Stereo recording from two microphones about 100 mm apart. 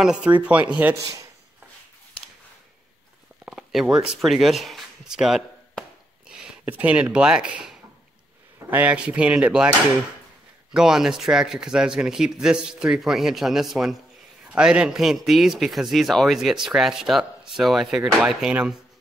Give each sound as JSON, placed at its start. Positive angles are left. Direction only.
{"t": 0.0, "sound": "speech", "side_deg": -10}
{"t": 0.9, "sound": "speech", "side_deg": -30}
{"t": 3.4, "sound": "a sound", "side_deg": -5}
{"t": 8.6, "sound": "speech", "side_deg": -15}
{"t": 10.7, "sound": "a man's voice", "side_deg": -5}